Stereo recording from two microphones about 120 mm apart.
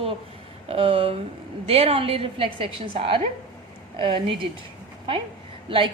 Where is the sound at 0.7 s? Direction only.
50° right (ahead or behind).